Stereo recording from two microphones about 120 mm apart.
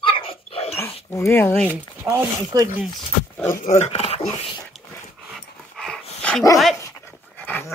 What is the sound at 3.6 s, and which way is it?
Speech, 70° left (ahead or behind).